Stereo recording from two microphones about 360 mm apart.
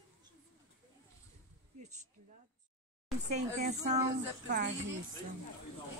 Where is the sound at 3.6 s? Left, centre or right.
Centre.